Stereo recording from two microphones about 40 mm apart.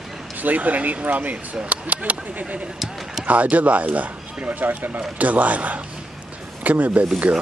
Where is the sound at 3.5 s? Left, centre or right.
Right.